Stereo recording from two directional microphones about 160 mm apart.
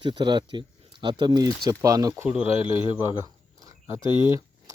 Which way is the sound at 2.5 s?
35° left (ahead or behind).